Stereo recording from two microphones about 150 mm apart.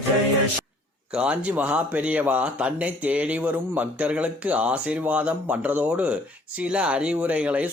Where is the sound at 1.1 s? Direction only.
10° right (ahead or behind).